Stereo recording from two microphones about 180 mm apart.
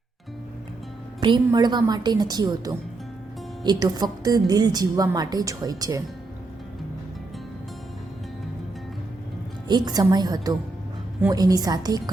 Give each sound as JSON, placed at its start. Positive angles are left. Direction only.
{"t": 1.5, "sound": "a woman's voice", "side_deg": -25}
{"t": 9.6, "sound": "a woman's voice", "side_deg": -25}